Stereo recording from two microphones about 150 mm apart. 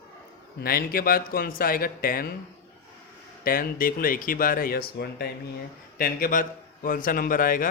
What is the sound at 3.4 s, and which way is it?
A man's voice, 70° left (ahead or behind).